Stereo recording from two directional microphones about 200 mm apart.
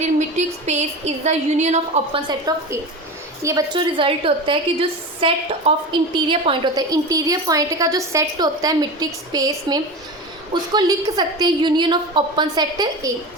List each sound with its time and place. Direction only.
0.0 s speech: 35° right (ahead or behind)
2.5 s a woman's voice: 20° right (ahead or behind)